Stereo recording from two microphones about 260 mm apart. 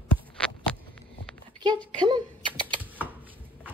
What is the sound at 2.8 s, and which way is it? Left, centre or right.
Typing, centre.